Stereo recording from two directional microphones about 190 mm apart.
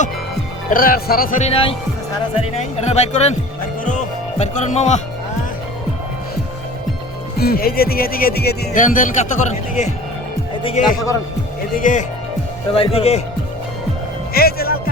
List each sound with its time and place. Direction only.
0.7 s speech: 50° left (ahead or behind)
4.4 s speech: 35° left (ahead or behind)
7.3 s speech: 55° left (ahead or behind); by 10.8 s 30° left (ahead or behind)
11.8 s speech: 40° left (ahead or behind)
12.7 s speech: 30° left (ahead or behind)
14.3 s speech: 55° left (ahead or behind)